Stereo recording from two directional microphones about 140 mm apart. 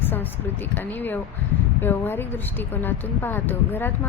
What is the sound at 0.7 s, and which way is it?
Speech, 15° left (ahead or behind).